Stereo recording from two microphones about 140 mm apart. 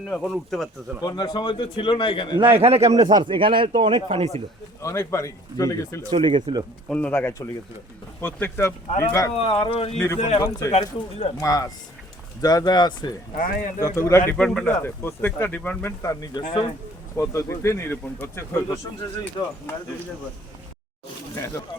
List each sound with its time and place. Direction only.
0.1 s speech: 5° left (ahead or behind)
1.0 s a man's voice: 30° left (ahead or behind)
2.4 s speech: 45° right (ahead or behind)
3.0 s speech: 30° right (ahead or behind); by 4.4 s 45° right (ahead or behind)
4.8 s speech: 20° left (ahead or behind)
6.1 s speech: 35° right (ahead or behind)
6.9 s speech: 10° left (ahead or behind)
9.4 s speech: 45° left (ahead or behind)
11.3 s speech: 25° left (ahead or behind)
13.3 s speech: 75° left (ahead or behind)
13.8 s speech: 20° left (ahead or behind)
14.3 s speech: 5° left (ahead or behind)
14.8 s speech: 15° left (ahead or behind)
21.3 s speech: 15° left (ahead or behind)